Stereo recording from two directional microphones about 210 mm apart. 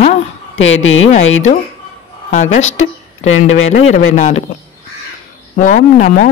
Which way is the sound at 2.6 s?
70° left (ahead or behind).